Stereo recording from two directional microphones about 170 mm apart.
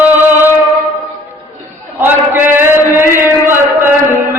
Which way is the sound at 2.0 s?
10° right (ahead or behind).